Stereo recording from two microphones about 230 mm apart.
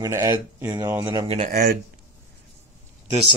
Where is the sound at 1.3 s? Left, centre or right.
Right.